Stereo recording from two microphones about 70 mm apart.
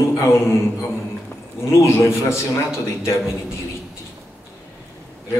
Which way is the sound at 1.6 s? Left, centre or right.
Left.